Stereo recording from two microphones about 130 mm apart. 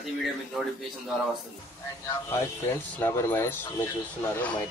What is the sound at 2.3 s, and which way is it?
Speech, 20° left (ahead or behind).